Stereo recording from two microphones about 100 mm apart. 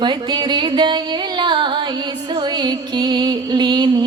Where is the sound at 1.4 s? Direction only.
55° right (ahead or behind).